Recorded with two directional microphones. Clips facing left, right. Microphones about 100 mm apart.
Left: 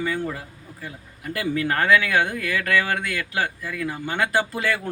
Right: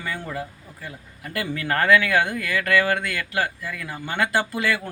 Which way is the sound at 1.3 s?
20° left (ahead or behind).